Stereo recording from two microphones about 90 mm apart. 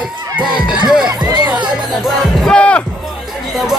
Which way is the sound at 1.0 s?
50° right (ahead or behind).